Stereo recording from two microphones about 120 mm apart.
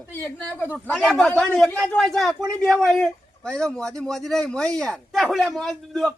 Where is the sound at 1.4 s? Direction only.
5° left (ahead or behind).